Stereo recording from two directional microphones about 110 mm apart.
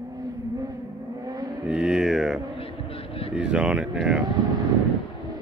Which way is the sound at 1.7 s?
5° right (ahead or behind).